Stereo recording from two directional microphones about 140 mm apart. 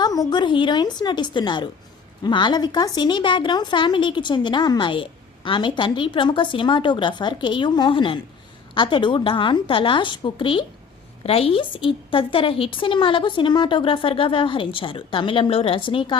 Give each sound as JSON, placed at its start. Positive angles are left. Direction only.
{"t": 0.0, "sound": "speech", "side_deg": 30}